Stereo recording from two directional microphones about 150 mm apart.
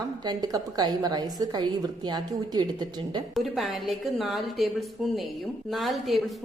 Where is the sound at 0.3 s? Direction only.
25° right (ahead or behind).